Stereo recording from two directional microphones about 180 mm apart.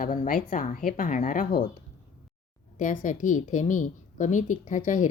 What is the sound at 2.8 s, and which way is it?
A woman's voice, 45° left (ahead or behind).